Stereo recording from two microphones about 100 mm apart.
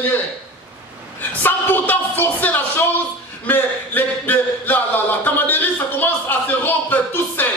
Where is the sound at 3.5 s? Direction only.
20° left (ahead or behind).